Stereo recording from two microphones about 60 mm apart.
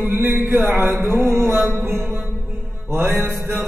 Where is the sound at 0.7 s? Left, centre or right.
Right.